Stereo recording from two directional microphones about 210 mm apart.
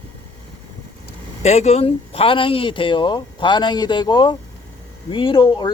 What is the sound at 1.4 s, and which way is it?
Speech, 30° left (ahead or behind).